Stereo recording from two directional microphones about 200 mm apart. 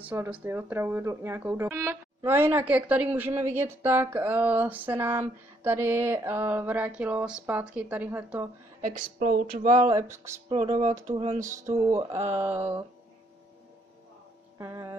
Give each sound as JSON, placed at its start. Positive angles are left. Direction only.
{"t": 0.0, "sound": "speech", "side_deg": -10}
{"t": 9.2, "sound": "a sound", "side_deg": -45}
{"t": 9.8, "sound": "speech", "side_deg": -15}
{"t": 10.5, "sound": "a sound", "side_deg": -30}
{"t": 11.7, "sound": "speech", "side_deg": -15}
{"t": 14.6, "sound": "speech", "side_deg": -15}